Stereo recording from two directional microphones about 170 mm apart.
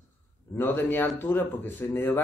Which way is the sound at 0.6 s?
10° left (ahead or behind).